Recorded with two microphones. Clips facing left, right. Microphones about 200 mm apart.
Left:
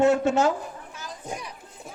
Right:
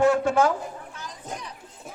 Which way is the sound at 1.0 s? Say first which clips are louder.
Left 5 dB; 10° left (ahead or behind).